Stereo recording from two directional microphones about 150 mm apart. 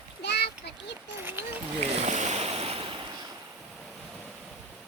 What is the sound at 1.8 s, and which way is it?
Boat, 50° right (ahead or behind).